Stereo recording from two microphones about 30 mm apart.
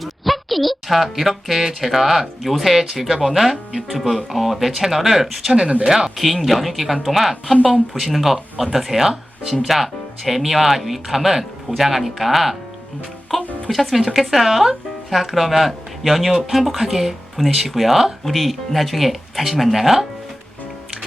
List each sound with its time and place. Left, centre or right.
0.0 s a woman's voice: centre
5.8 s speech: centre
6.1 s speech: centre